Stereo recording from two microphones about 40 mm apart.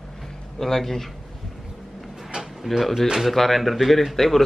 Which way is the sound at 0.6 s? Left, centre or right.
Centre.